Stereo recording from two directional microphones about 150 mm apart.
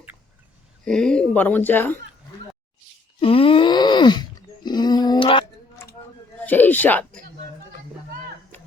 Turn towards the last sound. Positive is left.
turn(degrees=10)  # may be behind; listen again after turning